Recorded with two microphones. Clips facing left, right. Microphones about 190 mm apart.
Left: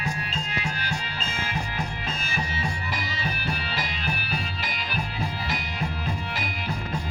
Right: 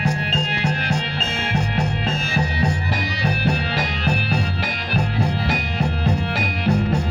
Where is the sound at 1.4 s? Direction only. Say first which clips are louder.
Right 8 dB; 70° right (ahead or behind); by 4.7 s 55° right (ahead or behind).